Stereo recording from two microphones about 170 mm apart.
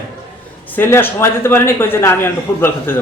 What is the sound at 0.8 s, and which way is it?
A man's voice, 15° left (ahead or behind).